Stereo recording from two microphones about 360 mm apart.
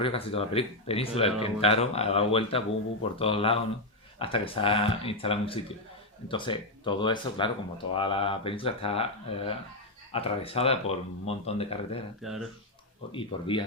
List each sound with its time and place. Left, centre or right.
0.0 s speech: centre
12.2 s speech: centre
13.1 s speech: centre